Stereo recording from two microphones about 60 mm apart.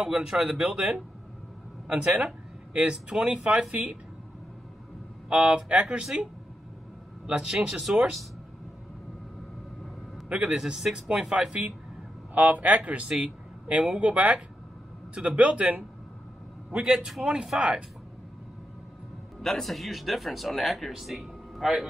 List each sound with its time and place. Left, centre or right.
0.0 s speech: centre
2.2 s speech: centre
5.3 s speech: centre
7.2 s speech: centre
10.3 s speech: centre
16.7 s speech: centre
19.4 s speech: centre